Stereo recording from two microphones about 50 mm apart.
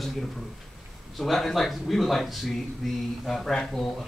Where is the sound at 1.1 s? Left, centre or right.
Centre.